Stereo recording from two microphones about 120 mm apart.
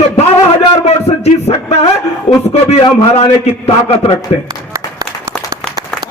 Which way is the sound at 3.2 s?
60° left (ahead or behind).